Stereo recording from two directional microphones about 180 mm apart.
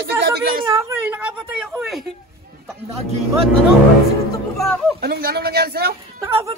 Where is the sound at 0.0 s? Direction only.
60° right (ahead or behind).